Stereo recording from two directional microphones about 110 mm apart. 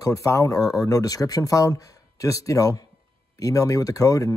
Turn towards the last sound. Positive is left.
turn(degrees=30)  # may be behind; listen again after turning